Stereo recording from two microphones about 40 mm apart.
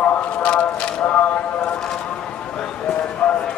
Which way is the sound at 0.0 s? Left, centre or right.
Left.